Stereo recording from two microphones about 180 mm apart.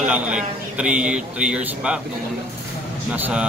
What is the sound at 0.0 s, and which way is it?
A man's voice, 5° right (ahead or behind).